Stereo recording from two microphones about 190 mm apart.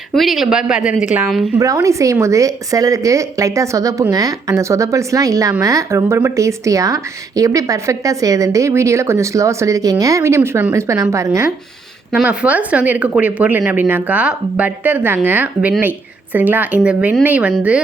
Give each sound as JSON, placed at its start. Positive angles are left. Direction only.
{"t": 0.1, "sound": "speech", "side_deg": 0}
{"t": 1.5, "sound": "a woman's voice", "side_deg": -15}